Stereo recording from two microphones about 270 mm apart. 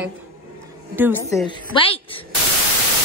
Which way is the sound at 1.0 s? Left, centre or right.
Centre.